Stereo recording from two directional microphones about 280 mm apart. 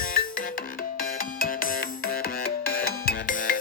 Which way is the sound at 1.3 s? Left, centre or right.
Left.